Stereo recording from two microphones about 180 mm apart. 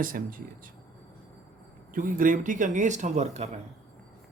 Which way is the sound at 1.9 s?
50° right (ahead or behind).